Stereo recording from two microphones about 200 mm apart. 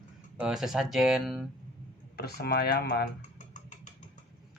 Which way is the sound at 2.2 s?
50° left (ahead or behind).